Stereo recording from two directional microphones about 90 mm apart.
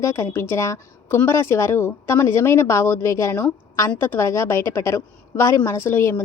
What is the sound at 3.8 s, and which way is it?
A woman's voice, 20° left (ahead or behind).